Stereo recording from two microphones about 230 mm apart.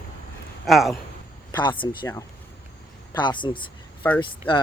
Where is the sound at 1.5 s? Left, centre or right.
Centre.